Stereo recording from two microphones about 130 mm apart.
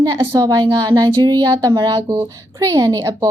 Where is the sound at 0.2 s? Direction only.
25° right (ahead or behind).